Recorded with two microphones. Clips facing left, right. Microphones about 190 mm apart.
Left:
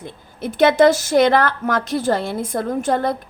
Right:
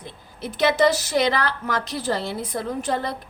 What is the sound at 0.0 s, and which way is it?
A woman's voice, 50° left (ahead or behind).